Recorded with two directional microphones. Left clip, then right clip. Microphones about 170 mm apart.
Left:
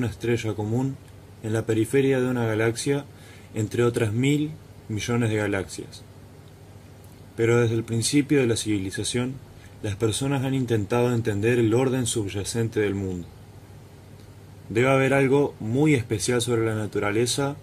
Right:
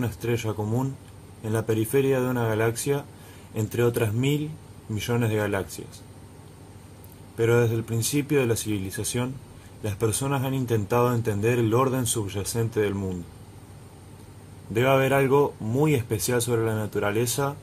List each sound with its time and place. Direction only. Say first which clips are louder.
0.0 s a man's voice: left 2 dB; 20° left (ahead or behind)
7.3 s a man's voice: left 1 dB; 20° left (ahead or behind)
14.7 s a man's voice: left 1 dB; 20° left (ahead or behind)